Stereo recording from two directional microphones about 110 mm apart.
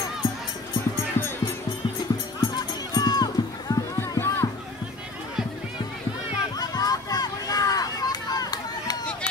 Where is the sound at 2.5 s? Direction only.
35° left (ahead or behind).